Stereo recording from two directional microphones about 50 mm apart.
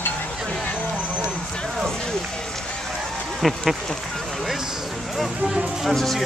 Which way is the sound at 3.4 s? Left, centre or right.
Centre.